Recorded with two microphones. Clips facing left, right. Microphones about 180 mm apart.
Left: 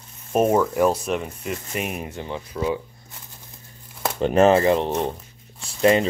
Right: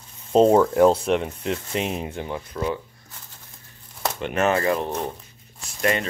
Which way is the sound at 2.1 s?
15° right (ahead or behind).